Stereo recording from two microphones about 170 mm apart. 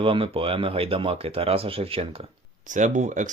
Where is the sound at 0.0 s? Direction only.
30° right (ahead or behind).